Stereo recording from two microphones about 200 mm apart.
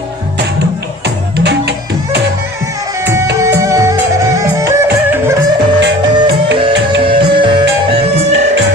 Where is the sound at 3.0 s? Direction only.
15° right (ahead or behind).